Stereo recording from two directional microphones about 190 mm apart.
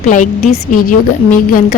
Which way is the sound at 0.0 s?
40° left (ahead or behind).